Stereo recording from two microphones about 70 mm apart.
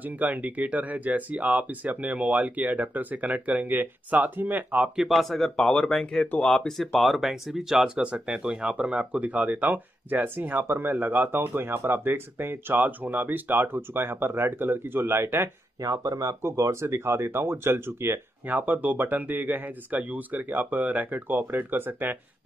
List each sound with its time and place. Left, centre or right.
0.0 s speech: right
4.8 s speech: centre; by 15.5 s right
15.8 s speech: right